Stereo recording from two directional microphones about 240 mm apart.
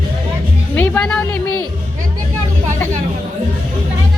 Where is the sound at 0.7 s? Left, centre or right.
Centre.